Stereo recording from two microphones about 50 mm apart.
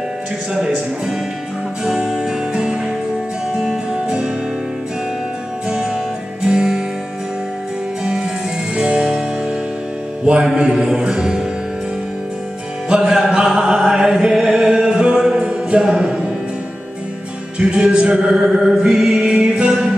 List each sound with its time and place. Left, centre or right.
1.9 s music: centre
5.7 s music: centre
8.0 s music: centre
10.2 s mantra: centre
12.8 s music: centre
17.6 s music: centre
18.3 s mantra: centre
19.5 s music: right